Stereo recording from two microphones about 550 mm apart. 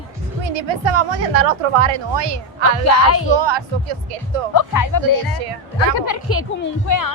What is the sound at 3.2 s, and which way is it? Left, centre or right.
Speech, right.